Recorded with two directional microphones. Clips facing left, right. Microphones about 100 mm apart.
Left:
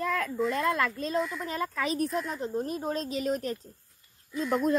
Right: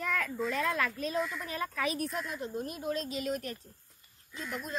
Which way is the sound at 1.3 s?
30° left (ahead or behind).